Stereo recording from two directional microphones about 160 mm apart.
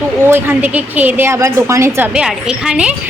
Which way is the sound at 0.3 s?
15° right (ahead or behind).